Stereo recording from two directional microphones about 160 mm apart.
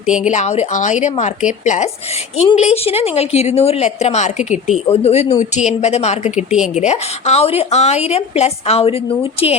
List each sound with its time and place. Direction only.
0.3 s a woman's voice: 45° left (ahead or behind)